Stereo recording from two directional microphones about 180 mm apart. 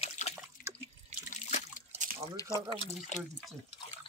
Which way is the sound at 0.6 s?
55° left (ahead or behind).